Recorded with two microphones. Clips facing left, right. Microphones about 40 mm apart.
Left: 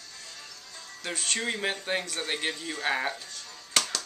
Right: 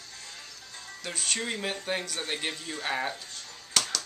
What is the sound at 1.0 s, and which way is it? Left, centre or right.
Speech, centre.